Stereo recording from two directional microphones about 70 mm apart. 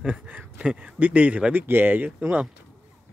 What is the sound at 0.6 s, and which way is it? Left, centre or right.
Speech, centre.